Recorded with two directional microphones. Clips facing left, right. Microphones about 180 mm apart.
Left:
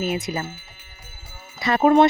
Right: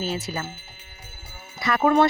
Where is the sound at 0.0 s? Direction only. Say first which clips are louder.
Left 3 dB; 15° left (ahead or behind).